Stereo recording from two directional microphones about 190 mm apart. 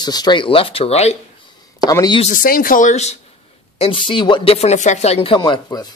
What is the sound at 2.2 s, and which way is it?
Speech, 45° left (ahead or behind).